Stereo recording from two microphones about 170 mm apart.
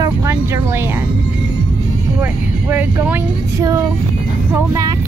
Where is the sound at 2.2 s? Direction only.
10° right (ahead or behind).